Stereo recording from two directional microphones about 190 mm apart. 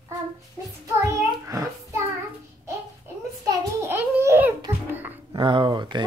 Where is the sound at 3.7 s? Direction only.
10° right (ahead or behind).